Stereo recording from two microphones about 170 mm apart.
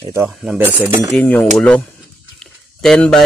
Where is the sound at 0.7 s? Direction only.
10° right (ahead or behind).